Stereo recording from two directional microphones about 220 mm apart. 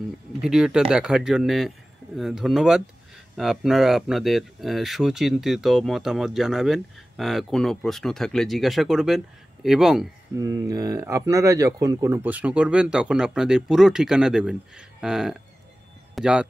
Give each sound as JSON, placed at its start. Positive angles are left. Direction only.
{"t": 0.4, "sound": "speech", "side_deg": 0}
{"t": 10.3, "sound": "speech", "side_deg": -15}